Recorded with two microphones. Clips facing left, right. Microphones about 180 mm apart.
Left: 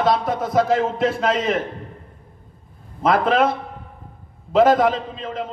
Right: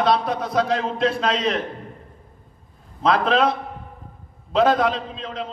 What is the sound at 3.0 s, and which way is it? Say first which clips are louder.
Speech: left 1 dB; 50° left (ahead or behind).